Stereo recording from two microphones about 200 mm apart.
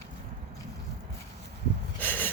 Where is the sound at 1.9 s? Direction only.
10° left (ahead or behind).